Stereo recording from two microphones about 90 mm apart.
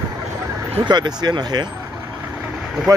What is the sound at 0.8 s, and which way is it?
Speech, 50° right (ahead or behind).